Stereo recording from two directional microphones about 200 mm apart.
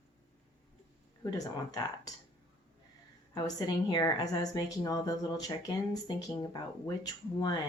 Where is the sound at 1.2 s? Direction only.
20° left (ahead or behind).